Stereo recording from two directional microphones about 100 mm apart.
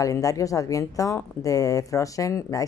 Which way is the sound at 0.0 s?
35° left (ahead or behind).